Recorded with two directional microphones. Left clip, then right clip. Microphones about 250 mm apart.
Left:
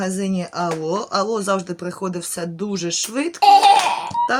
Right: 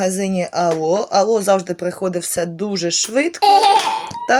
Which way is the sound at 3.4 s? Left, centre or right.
Centre.